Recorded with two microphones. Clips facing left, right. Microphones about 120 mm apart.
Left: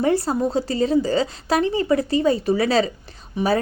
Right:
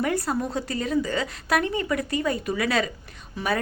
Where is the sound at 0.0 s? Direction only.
30° left (ahead or behind).